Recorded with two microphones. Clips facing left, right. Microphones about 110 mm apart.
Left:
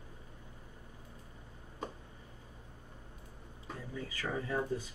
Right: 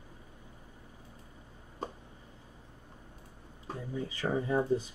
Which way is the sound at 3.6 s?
25° right (ahead or behind).